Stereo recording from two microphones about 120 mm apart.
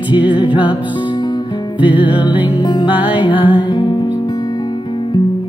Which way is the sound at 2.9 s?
15° right (ahead or behind).